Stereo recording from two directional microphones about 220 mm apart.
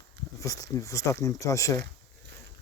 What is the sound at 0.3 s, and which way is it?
Speech, 15° left (ahead or behind).